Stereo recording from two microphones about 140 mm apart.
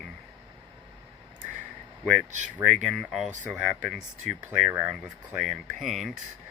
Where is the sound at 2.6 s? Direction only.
Centre (ahead or behind).